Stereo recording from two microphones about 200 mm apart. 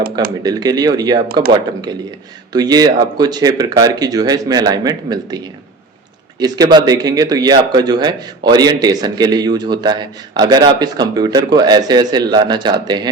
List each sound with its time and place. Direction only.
0.4 s speech: 20° right (ahead or behind)
1.3 s speech: 50° right (ahead or behind)
2.5 s speech: 20° right (ahead or behind)
6.4 s speech: 20° right (ahead or behind)